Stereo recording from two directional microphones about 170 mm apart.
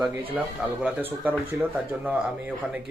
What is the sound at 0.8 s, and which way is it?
Speech, 10° right (ahead or behind).